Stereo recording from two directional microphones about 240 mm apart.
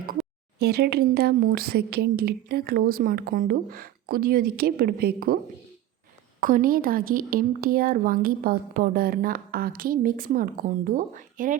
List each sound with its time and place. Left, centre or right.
0.6 s speech: right
6.4 s speech: right